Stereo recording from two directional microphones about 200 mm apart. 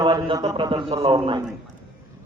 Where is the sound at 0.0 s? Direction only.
20° right (ahead or behind).